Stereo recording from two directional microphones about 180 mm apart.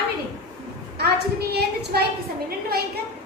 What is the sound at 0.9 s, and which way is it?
A woman's voice, 65° right (ahead or behind).